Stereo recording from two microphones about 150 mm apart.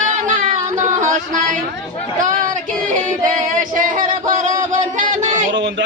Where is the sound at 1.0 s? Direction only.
55° right (ahead or behind).